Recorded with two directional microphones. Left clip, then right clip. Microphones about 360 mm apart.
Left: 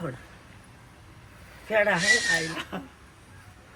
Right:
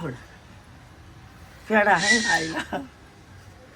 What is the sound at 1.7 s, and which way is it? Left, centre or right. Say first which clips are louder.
Speech: right 4 dB; right.